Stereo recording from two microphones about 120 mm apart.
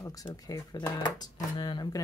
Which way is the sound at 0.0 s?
30° left (ahead or behind).